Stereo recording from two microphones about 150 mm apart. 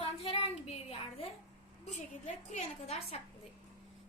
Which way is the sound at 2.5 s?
45° left (ahead or behind).